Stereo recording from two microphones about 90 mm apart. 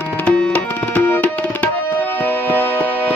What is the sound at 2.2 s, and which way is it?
Music, 20° left (ahead or behind).